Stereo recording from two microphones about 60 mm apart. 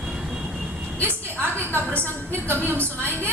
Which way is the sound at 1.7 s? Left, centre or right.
Right.